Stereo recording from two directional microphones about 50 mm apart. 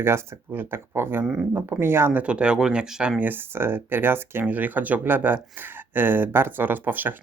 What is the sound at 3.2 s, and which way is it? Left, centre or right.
Speech, right.